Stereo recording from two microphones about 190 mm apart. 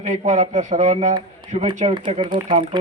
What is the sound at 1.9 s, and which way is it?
Speech, 25° right (ahead or behind).